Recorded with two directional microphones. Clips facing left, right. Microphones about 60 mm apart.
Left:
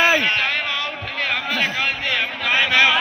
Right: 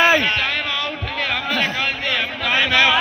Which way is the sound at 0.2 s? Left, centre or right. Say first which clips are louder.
Even; left.